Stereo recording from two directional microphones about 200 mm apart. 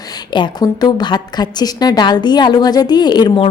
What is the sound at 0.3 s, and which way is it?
A woman's voice, 20° left (ahead or behind).